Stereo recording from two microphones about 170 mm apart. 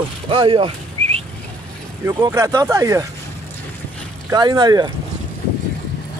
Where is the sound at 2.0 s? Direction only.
15° right (ahead or behind).